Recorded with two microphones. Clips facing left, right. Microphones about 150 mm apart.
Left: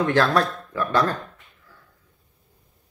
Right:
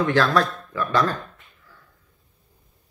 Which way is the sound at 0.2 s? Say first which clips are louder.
Even; 30° left (ahead or behind).